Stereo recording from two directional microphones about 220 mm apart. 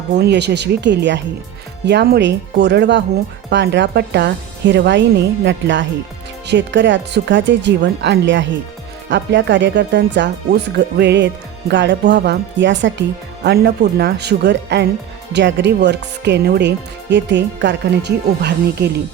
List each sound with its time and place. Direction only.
0.1 s speech: 50° right (ahead or behind)